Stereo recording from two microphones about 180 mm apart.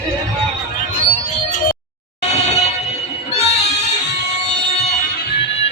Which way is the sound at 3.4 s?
35° left (ahead or behind).